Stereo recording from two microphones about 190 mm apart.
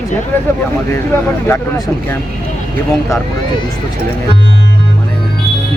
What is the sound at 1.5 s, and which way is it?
Speech, 15° left (ahead or behind).